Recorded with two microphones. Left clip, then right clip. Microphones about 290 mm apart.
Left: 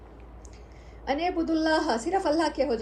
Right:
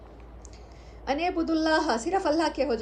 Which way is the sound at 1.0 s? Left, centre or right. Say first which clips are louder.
Even; centre.